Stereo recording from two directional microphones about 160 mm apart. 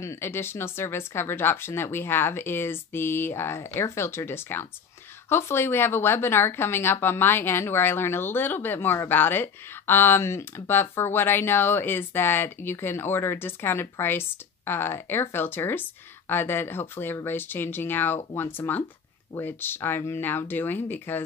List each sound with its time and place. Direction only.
0.0 s a woman's voice: 15° left (ahead or behind)